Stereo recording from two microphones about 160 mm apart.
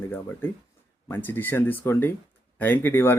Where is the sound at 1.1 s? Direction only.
10° left (ahead or behind).